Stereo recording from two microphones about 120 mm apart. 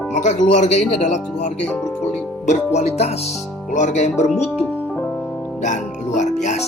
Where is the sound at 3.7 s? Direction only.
85° left; by 4.5 s 70° left (ahead or behind).